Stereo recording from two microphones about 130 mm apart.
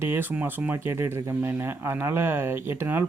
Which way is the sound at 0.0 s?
15° right (ahead or behind).